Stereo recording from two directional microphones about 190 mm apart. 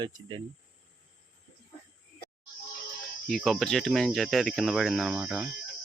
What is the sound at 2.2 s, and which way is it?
Music, 55° left (ahead or behind).